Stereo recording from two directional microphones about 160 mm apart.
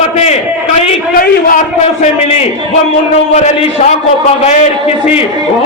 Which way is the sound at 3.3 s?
45° left (ahead or behind).